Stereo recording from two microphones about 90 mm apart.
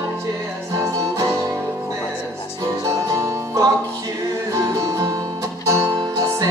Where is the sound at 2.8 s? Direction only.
35° right (ahead or behind).